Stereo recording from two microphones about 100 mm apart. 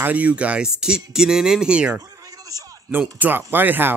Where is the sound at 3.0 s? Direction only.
15° right (ahead or behind).